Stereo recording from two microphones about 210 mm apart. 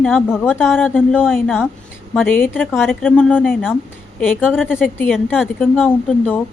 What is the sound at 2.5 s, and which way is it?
A woman's voice, centre (ahead or behind).